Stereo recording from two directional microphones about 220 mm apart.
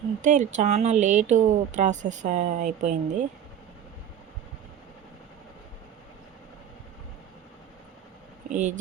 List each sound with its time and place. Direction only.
0.2 s speech: 35° right (ahead or behind)
8.5 s speech: 35° right (ahead or behind)